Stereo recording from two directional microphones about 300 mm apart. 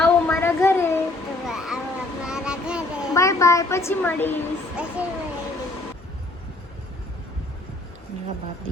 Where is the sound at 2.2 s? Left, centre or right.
Centre.